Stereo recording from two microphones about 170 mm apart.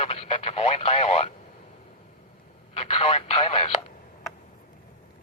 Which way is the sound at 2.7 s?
35° left (ahead or behind).